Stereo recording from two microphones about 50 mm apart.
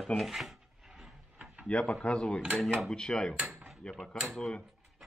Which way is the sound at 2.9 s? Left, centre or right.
Centre.